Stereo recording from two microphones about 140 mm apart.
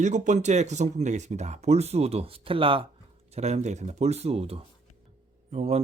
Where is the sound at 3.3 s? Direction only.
50° right (ahead or behind).